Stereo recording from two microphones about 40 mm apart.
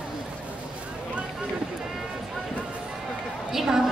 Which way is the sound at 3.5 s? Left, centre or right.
Centre.